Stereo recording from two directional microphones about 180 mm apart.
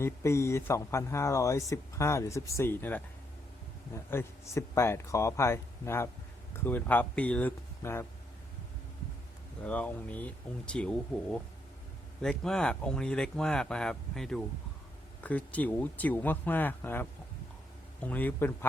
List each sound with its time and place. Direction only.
0.0 s speech: 15° left (ahead or behind)
9.6 s speech: 10° left (ahead or behind)